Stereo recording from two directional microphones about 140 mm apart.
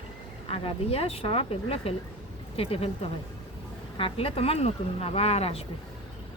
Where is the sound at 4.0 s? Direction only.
40° left (ahead or behind).